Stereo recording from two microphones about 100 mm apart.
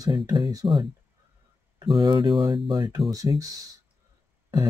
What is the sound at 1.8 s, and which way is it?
Speech, 50° right (ahead or behind).